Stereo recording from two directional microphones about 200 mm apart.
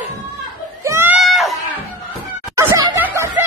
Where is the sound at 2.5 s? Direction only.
15° right (ahead or behind).